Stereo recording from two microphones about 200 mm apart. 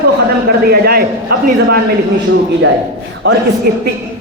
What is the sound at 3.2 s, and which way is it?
Speech, 60° right (ahead or behind).